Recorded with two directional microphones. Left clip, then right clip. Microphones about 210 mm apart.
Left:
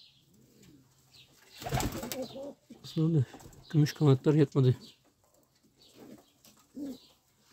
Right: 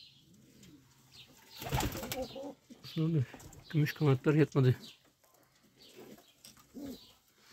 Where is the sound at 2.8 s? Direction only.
25° left (ahead or behind).